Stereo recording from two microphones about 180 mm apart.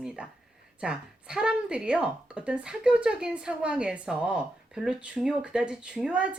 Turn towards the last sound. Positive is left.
turn(degrees=-5)  # may be behind; listen again after turning